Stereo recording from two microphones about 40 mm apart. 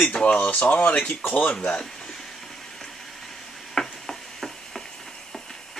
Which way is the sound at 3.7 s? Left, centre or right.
Centre.